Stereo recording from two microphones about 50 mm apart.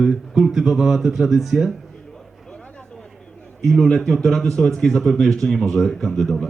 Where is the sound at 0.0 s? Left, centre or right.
Centre.